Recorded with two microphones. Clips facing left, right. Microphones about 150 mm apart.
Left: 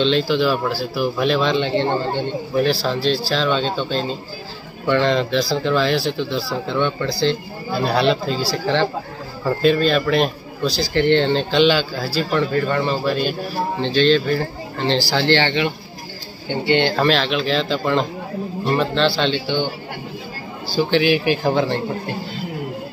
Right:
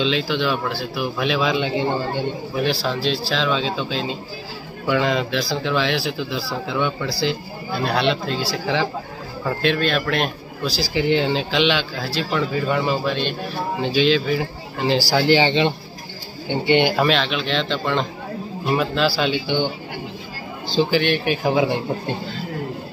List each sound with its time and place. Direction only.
0.0 s speech: centre (ahead or behind); by 20.9 s 20° right (ahead or behind)
20.9 s speech: centre (ahead or behind)